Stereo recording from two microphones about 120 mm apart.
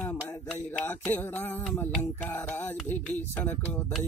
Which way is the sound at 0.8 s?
15° left (ahead or behind).